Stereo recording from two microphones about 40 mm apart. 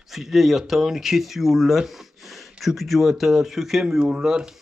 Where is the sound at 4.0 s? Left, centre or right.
Centre.